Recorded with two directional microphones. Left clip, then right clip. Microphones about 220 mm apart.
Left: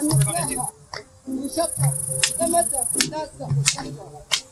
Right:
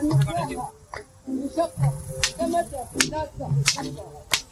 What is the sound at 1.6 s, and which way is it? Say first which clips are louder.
A man's voice: left 1 dB; 35° left (ahead or behind).